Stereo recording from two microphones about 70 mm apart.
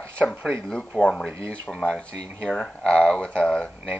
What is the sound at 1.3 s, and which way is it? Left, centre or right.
Speech, right.